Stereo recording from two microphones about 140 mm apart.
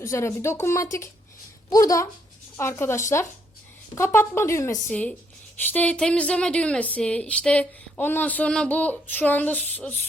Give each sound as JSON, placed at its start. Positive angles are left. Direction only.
{"t": 0.0, "sound": "speech", "side_deg": 20}
{"t": 4.9, "sound": "speech", "side_deg": 10}